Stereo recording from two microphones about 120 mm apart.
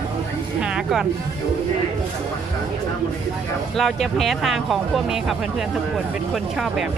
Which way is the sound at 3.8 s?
Centre (ahead or behind).